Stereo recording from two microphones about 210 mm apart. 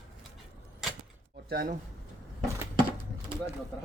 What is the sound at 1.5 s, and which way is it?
Speech, 45° right (ahead or behind).